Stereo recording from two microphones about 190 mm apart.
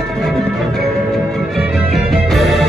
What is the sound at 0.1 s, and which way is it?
Music, centre (ahead or behind).